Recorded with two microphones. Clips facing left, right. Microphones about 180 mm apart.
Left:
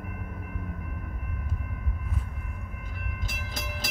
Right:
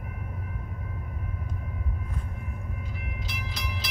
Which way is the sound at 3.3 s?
50° left (ahead or behind).